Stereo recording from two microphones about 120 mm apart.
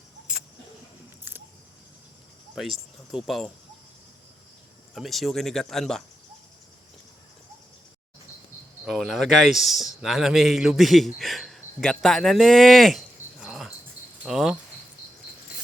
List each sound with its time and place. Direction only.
2.6 s speech: centre (ahead or behind)
4.9 s speech: centre (ahead or behind)
8.9 s a man's voice: centre (ahead or behind)